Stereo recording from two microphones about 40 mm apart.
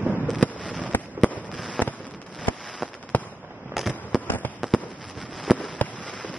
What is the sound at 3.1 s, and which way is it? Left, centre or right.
Fireworks, left.